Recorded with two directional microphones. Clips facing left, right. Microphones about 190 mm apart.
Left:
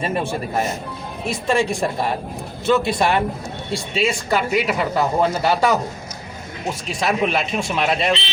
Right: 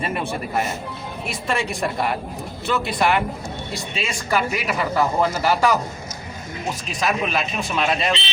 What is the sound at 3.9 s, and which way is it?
Speech, 25° left (ahead or behind).